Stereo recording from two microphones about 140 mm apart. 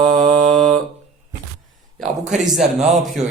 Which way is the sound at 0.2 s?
55° right (ahead or behind).